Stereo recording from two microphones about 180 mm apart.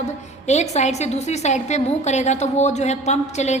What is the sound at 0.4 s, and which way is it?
A woman's voice, 40° left (ahead or behind).